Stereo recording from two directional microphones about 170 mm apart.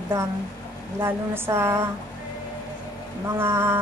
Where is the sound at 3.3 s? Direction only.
15° right (ahead or behind).